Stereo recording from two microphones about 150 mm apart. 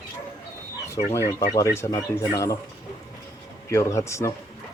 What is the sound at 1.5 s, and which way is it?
Speech, 20° left (ahead or behind).